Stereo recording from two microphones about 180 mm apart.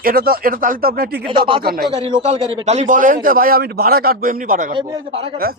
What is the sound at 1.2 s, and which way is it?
Speech, 25° right (ahead or behind).